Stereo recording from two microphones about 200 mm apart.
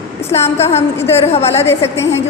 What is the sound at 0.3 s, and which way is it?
A woman's voice, 30° left (ahead or behind).